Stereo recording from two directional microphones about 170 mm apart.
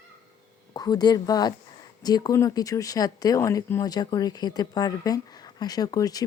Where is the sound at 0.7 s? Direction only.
25° left (ahead or behind).